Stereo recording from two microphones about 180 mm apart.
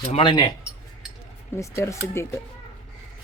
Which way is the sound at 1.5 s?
15° left (ahead or behind).